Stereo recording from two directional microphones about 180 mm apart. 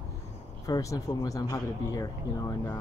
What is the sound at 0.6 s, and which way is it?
Speech, 20° left (ahead or behind).